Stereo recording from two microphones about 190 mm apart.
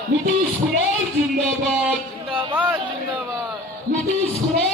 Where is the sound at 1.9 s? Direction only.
5° right (ahead or behind).